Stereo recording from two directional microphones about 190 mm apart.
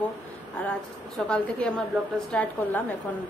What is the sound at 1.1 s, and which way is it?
A woman's voice, 5° left (ahead or behind).